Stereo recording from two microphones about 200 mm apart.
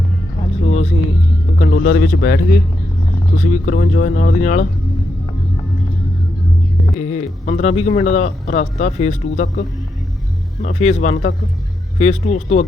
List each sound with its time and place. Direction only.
0.6 s a sound: 35° left (ahead or behind)
1.5 s a man's voice: 45° left (ahead or behind)
6.9 s a man's voice: 35° left (ahead or behind)